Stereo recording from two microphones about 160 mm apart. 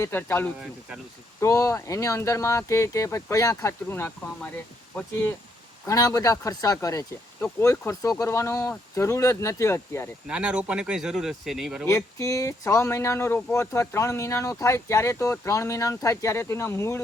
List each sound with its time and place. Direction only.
0.0 s speech: 15° left (ahead or behind)
5.8 s speech: 20° left (ahead or behind)
10.2 s speech: 5° right (ahead or behind)
11.9 s speech: 20° left (ahead or behind)